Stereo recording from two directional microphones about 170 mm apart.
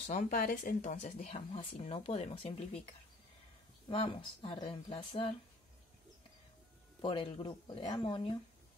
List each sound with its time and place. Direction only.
0.0 s speech: 45° left (ahead or behind)
1.0 s speech: 40° left (ahead or behind)
3.9 s speech: 30° left (ahead or behind)
7.0 s speech: 30° left (ahead or behind)